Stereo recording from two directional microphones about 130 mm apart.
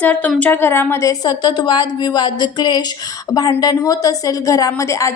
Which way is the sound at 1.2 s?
35° left (ahead or behind).